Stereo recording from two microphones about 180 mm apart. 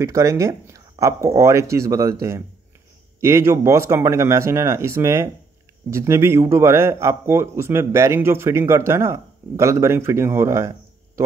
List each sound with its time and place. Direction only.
0.0 s a man's voice: 15° right (ahead or behind)